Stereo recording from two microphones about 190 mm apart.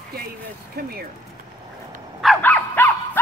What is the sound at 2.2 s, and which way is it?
Dog, 5° left (ahead or behind).